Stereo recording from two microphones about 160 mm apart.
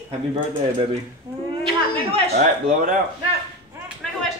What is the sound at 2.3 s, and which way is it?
Speech, 50° right (ahead or behind).